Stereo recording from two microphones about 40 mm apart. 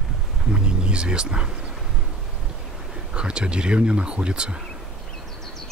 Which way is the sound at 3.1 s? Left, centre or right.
Right.